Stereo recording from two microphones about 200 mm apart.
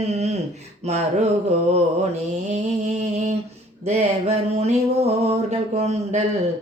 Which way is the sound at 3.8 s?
35° right (ahead or behind).